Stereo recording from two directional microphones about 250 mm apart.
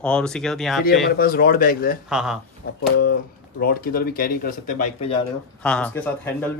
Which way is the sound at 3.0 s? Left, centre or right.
Left.